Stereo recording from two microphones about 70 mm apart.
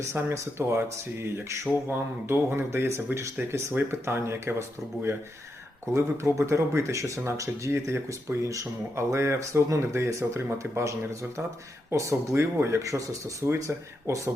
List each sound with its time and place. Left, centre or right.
0.1 s speech: right
5.8 s speech: right
8.4 s speech: right
13.4 s speech: right